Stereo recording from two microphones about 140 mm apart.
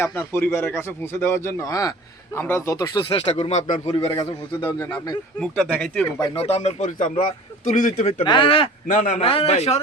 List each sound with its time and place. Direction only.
0.0 s speech: 15° left (ahead or behind)
3.0 s speech: 45° left (ahead or behind)
4.2 s a man's voice: 30° left (ahead or behind)
5.7 s speech: 10° left (ahead or behind)
6.3 s a man's voice: 45° left (ahead or behind); by 8.1 s 65° left (ahead or behind)
8.2 s a man's voice: 35° left (ahead or behind)
8.9 s a man's voice: 65° left (ahead or behind)
9.2 s speech: 45° left (ahead or behind)